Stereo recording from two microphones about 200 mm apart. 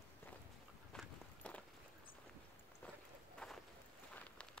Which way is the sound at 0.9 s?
5° left (ahead or behind).